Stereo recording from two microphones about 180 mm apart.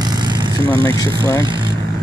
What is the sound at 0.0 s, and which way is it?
Vehicle, 25° right (ahead or behind).